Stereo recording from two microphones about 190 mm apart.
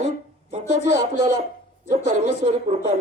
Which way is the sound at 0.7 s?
65° left (ahead or behind).